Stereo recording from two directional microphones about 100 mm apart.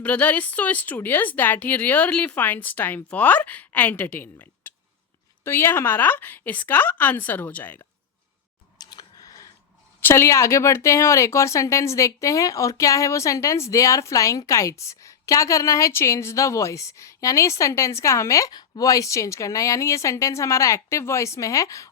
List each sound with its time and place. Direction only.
0.0 s a woman's voice: 15° left (ahead or behind)
8.8 s a sound: 45° left (ahead or behind)
10.0 s speech: 25° left (ahead or behind)